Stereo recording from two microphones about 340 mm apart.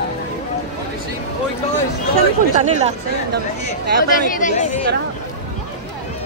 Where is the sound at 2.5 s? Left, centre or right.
Centre.